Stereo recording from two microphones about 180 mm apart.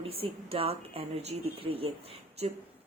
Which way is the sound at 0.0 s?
30° right (ahead or behind).